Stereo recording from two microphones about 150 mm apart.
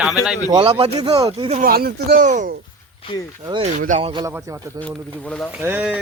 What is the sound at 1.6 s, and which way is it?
Speech, 90° right.